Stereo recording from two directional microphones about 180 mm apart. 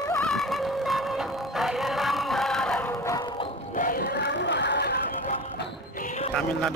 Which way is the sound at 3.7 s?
50° left (ahead or behind).